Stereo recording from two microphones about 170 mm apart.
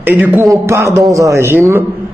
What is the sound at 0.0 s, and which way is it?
A man's voice, 10° right (ahead or behind).